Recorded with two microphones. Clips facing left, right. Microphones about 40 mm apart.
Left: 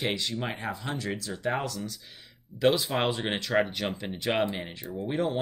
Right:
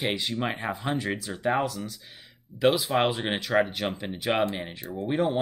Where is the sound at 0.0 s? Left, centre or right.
Centre.